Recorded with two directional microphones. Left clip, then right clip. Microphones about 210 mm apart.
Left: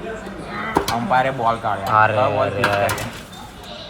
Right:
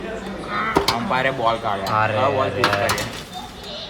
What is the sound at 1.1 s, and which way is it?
Speech, 35° left (ahead or behind).